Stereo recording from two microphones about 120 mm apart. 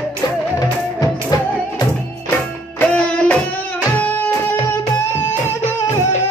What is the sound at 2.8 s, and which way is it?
Music, 10° left (ahead or behind).